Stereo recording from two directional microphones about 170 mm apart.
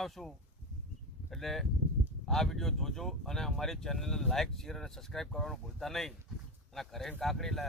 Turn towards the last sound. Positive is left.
turn(degrees=0)  # may be behind; listen again after turning